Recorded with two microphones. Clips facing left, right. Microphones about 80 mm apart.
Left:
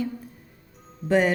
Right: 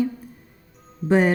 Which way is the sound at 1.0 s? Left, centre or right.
Right.